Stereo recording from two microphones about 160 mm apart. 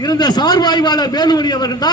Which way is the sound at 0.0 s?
25° left (ahead or behind).